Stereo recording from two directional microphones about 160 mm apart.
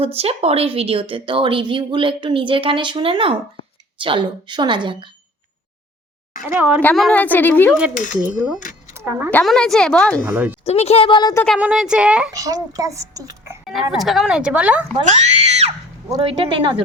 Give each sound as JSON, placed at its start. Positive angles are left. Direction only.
{"t": 0.0, "sound": "a woman's voice", "side_deg": -40}
{"t": 6.5, "sound": "speech", "side_deg": -10}
{"t": 6.8, "sound": "a woman's voice", "side_deg": 5}
{"t": 7.8, "sound": "speech", "side_deg": -5}
{"t": 9.3, "sound": "speech", "side_deg": 5}
{"t": 10.2, "sound": "speech", "side_deg": -10}
{"t": 10.7, "sound": "speech", "side_deg": 40}
{"t": 11.4, "sound": "speech", "side_deg": -5}
{"t": 12.3, "sound": "a child's voice", "side_deg": -20}
{"t": 13.9, "sound": "speech", "side_deg": 0}
{"t": 15.0, "sound": "speech", "side_deg": -45}
{"t": 16.0, "sound": "a woman's voice", "side_deg": -30}